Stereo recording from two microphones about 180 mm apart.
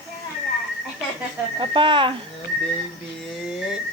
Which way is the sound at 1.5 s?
25° right (ahead or behind).